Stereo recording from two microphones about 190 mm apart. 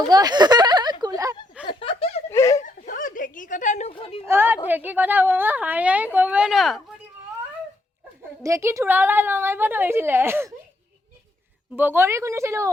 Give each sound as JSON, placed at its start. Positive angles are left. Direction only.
{"t": 0.1, "sound": "speech", "side_deg": -20}
{"t": 1.6, "sound": "chuckle", "side_deg": 30}
{"t": 2.3, "sound": "a sound", "side_deg": 15}
{"t": 2.6, "sound": "a sound", "side_deg": 45}
{"t": 4.3, "sound": "a woman's voice", "side_deg": -10}
{"t": 8.4, "sound": "a woman's voice", "side_deg": -15}
{"t": 11.8, "sound": "a woman's voice", "side_deg": -10}